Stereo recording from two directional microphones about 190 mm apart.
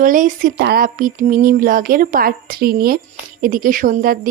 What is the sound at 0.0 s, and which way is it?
Speech, 45° right (ahead or behind).